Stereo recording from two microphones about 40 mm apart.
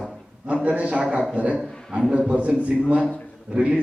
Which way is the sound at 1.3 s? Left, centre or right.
Right.